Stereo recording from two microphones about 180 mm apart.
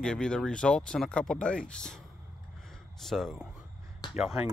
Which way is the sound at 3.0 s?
Centre (ahead or behind).